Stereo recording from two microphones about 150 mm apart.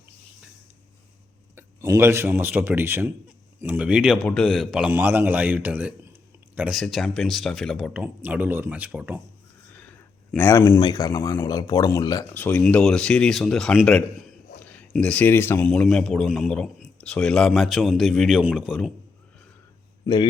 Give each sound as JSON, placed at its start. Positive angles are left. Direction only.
{"t": 1.5, "sound": "speech", "side_deg": -15}
{"t": 4.2, "sound": "a man's voice", "side_deg": 5}
{"t": 9.7, "sound": "a sound", "side_deg": 10}
{"t": 10.8, "sound": "speech", "side_deg": 25}
{"t": 12.3, "sound": "a man's voice", "side_deg": 10}